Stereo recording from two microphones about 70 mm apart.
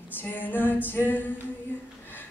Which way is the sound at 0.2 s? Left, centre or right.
Left.